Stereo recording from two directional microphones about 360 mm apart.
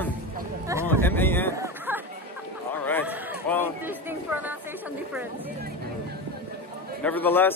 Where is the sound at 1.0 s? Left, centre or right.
Centre.